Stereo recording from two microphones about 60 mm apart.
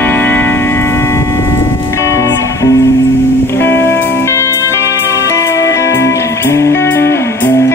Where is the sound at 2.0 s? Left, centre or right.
Left.